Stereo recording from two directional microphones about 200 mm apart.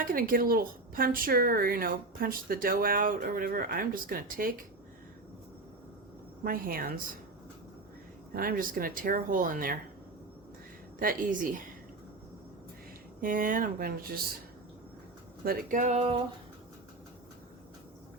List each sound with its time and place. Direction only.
0.0 s speech: 45° right (ahead or behind)
6.4 s speech: 45° right (ahead or behind)
8.3 s speech: 45° right (ahead or behind)
11.0 s speech: 45° right (ahead or behind)
13.2 s speech: 45° right (ahead or behind)
15.4 s a sound: 40° right (ahead or behind)